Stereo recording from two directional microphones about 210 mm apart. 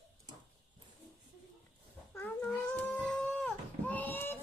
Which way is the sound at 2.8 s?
5° left (ahead or behind).